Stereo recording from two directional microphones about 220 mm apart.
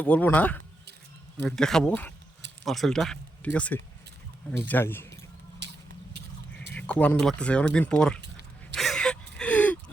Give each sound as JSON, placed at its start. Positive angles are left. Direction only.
{"t": 0.0, "sound": "speech", "side_deg": 5}
{"t": 5.6, "sound": "a sound", "side_deg": -50}
{"t": 6.7, "sound": "speech", "side_deg": 5}
{"t": 8.7, "sound": "gasp", "side_deg": 0}